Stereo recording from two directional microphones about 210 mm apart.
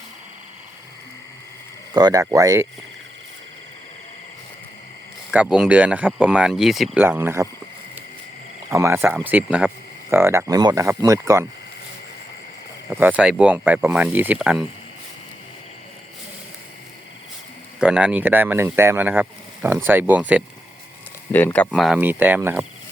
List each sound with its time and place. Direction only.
1.9 s speech: 20° right (ahead or behind)
5.3 s speech: 5° right (ahead or behind)
8.7 s speech: 15° right (ahead or behind)
12.9 s speech: 10° right (ahead or behind)
17.7 s speech: 5° right (ahead or behind)
21.3 s speech: 5° left (ahead or behind); by 22.6 s 10° right (ahead or behind)